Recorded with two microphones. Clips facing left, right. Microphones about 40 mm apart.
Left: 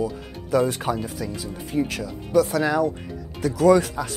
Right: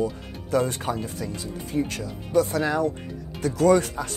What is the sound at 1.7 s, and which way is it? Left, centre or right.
Speech, centre.